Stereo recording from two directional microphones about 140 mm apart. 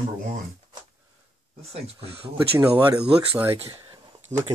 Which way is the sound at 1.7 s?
45° right (ahead or behind).